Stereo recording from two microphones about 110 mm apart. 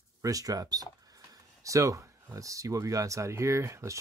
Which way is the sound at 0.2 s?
30° right (ahead or behind).